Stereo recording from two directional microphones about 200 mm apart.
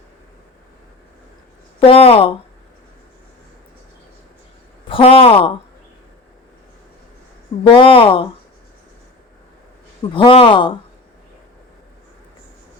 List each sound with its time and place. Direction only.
1.9 s speech: 30° left (ahead or behind)
4.9 s speech: 25° left (ahead or behind)
7.7 s speech: 25° left (ahead or behind)
10.2 s speech: 25° left (ahead or behind)